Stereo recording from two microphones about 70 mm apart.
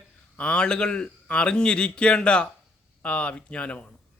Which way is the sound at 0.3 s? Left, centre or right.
Centre.